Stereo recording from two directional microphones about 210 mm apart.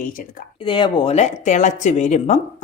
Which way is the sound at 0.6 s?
25° left (ahead or behind).